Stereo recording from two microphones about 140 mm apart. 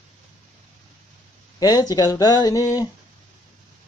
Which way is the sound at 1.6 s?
25° left (ahead or behind).